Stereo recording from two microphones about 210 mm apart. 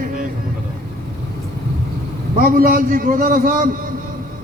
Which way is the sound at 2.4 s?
45° right (ahead or behind).